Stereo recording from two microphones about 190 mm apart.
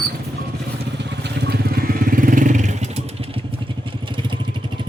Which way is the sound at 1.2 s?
60° right (ahead or behind).